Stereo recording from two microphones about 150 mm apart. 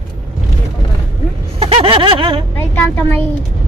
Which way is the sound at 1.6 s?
35° right (ahead or behind).